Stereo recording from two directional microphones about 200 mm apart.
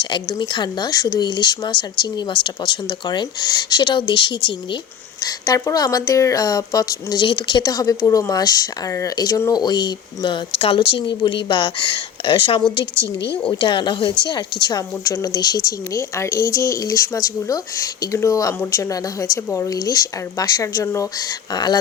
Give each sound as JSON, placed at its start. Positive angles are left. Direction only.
{"t": 0.0, "sound": "speech", "side_deg": 20}